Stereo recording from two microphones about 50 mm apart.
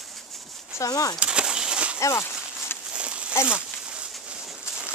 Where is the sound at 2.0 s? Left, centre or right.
Left.